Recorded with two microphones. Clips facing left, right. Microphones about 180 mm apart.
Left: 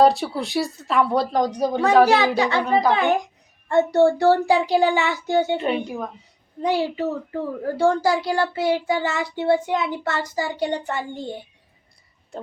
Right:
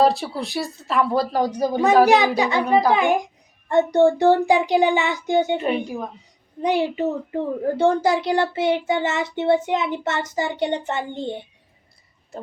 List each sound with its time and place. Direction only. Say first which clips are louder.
0.0 s speech: left 2 dB; centre (ahead or behind)
2.0 s a child's voice: right 1 dB; 15° right (ahead or behind)